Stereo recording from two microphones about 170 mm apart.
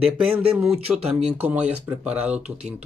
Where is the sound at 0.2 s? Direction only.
5° right (ahead or behind).